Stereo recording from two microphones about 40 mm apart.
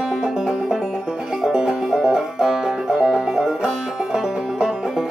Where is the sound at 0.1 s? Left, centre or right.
Centre.